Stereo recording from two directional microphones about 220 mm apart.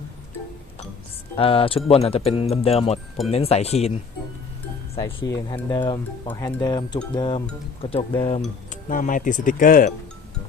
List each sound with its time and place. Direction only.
1.4 s speech: 25° left (ahead or behind)
4.9 s speech: 15° left (ahead or behind)
8.7 s speech: 35° left (ahead or behind)